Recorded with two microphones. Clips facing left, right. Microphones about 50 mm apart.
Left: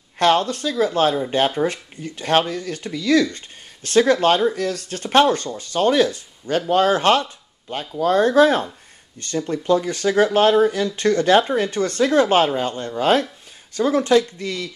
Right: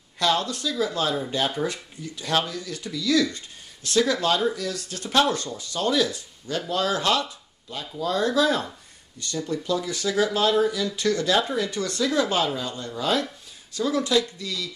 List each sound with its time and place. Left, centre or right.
0.2 s speech: left